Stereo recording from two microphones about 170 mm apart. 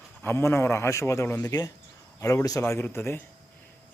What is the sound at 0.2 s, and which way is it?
A man's voice, 15° left (ahead or behind).